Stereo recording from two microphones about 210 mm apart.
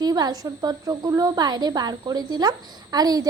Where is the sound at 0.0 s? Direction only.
20° right (ahead or behind).